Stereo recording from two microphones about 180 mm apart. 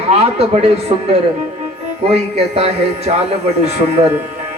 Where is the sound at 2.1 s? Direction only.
35° right (ahead or behind).